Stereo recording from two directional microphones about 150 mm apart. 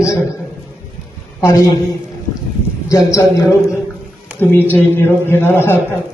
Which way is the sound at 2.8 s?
20° left (ahead or behind).